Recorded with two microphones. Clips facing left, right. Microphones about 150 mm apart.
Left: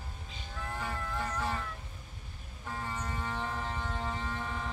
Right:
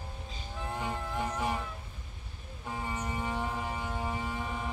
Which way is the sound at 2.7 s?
15° right (ahead or behind).